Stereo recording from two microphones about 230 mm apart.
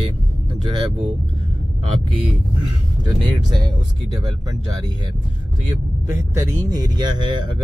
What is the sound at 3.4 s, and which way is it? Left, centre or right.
Speech, centre.